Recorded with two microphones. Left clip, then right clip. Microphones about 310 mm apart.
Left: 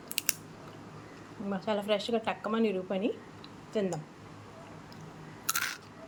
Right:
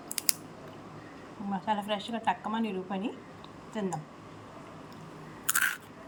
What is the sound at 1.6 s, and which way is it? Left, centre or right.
A woman's voice, centre.